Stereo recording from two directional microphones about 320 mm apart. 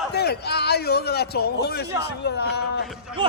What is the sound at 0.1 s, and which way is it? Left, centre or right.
A man's voice, left.